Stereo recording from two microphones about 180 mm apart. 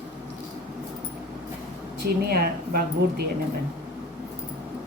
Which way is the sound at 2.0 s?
60° right (ahead or behind).